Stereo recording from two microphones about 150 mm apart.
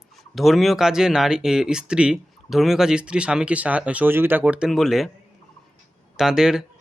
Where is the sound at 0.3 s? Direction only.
Centre (ahead or behind).